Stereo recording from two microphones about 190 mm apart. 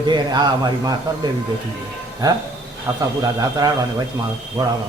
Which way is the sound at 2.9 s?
15° right (ahead or behind).